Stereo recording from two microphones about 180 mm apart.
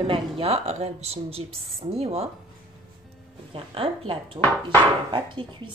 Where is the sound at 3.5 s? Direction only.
30° right (ahead or behind).